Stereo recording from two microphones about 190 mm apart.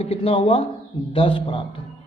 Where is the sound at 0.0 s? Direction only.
30° left (ahead or behind).